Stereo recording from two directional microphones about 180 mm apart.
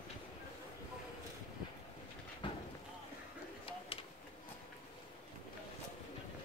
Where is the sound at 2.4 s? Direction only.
25° left (ahead or behind).